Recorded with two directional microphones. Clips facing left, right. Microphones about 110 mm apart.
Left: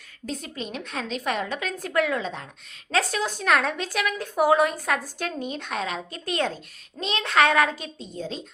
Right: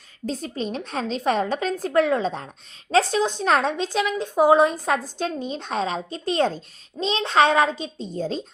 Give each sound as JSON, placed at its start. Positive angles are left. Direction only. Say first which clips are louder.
{"t": 0.3, "sound": "a woman's voice", "louder": "right 5 dB", "side_deg": -35}